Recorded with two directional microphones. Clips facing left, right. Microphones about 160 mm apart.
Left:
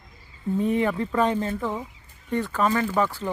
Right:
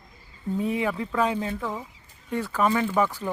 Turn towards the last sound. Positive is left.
turn(degrees=-10)  # may be behind; listen again after turning